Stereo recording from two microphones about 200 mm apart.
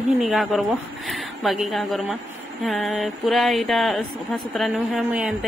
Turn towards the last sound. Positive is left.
turn(degrees=0)  # may be behind; listen again after turning